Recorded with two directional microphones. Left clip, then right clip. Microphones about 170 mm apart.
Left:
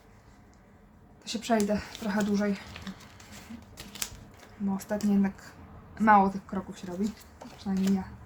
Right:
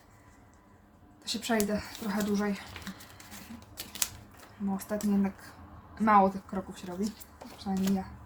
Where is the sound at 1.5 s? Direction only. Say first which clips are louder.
Left 4 dB; 20° left (ahead or behind).